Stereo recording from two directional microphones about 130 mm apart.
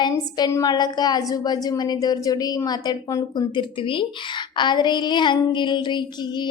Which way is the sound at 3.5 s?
40° left (ahead or behind).